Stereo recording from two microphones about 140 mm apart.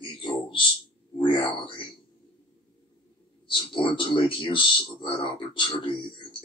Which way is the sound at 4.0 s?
35° left (ahead or behind).